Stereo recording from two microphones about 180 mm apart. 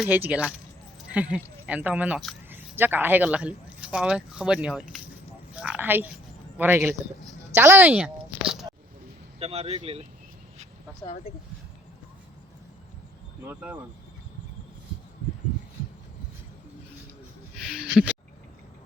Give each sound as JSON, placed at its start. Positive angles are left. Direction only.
{"t": 0.0, "sound": "speech", "side_deg": -10}
{"t": 9.4, "sound": "speech", "side_deg": -35}
{"t": 13.4, "sound": "speech", "side_deg": -10}
{"t": 17.6, "sound": "a sound", "side_deg": -5}